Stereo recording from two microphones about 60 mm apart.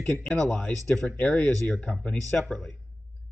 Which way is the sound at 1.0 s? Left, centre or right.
Left.